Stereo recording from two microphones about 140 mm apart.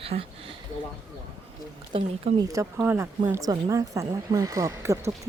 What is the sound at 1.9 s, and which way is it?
Speech, 35° right (ahead or behind).